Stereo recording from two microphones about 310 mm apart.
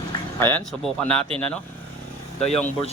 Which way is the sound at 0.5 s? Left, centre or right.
Centre.